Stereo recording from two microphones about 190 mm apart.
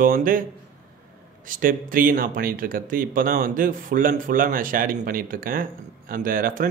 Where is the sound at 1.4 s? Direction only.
45° right (ahead or behind).